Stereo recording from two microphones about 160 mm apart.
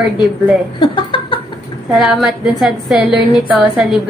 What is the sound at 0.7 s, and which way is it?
Speech, 30° left (ahead or behind).